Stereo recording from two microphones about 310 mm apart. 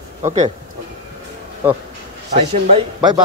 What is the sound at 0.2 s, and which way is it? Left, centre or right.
Speech, right.